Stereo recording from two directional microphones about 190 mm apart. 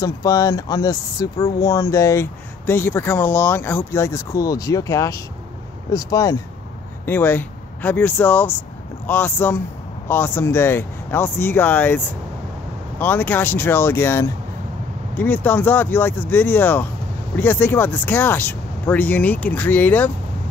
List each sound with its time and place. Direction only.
0.0 s speech: 20° left (ahead or behind)
13.0 s speech: 10° left (ahead or behind)